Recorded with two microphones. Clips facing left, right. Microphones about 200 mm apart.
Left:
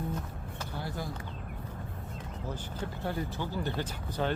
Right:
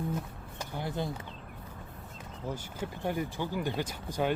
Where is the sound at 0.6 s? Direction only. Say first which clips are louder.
Right 3 dB; 20° right (ahead or behind).